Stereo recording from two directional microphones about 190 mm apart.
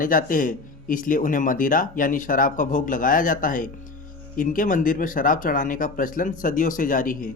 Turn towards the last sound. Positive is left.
turn(degrees=45)  # may be behind; listen again after turning